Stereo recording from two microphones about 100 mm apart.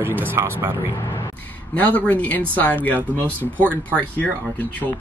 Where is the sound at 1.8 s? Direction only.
15° left (ahead or behind).